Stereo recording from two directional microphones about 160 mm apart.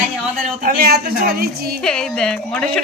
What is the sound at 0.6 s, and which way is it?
A woman's voice, 65° right (ahead or behind).